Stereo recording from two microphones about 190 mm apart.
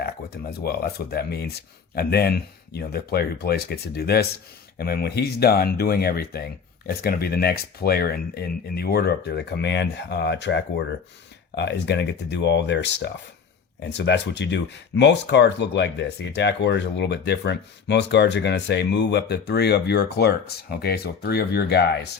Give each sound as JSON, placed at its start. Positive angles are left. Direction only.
{"t": 0.0, "sound": "speech", "side_deg": 55}